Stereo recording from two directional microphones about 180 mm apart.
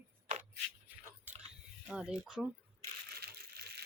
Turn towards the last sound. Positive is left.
turn(degrees=-60)  # may be behind; listen again after turning